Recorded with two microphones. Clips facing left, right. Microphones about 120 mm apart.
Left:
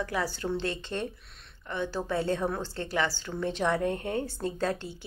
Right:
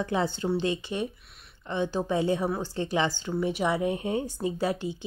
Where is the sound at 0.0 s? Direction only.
20° right (ahead or behind).